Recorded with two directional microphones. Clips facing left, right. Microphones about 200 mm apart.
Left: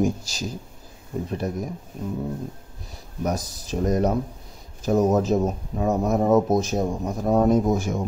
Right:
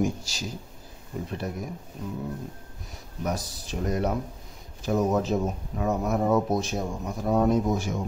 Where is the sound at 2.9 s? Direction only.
45° left (ahead or behind).